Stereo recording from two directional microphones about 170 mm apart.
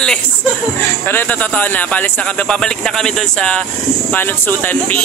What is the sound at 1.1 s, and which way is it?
Speech, 10° left (ahead or behind).